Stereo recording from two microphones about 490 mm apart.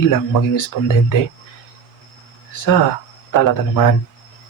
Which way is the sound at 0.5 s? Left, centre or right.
Left.